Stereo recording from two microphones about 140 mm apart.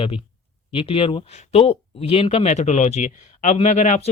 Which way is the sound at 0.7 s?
40° left (ahead or behind).